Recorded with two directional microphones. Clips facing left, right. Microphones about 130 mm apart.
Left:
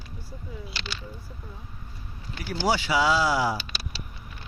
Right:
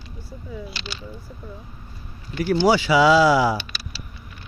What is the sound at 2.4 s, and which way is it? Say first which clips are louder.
Speech: right 8 dB; 80° right.